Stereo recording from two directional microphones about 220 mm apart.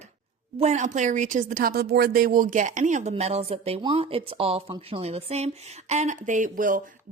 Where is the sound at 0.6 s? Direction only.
30° right (ahead or behind).